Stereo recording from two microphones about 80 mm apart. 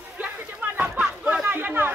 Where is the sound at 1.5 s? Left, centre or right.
Right.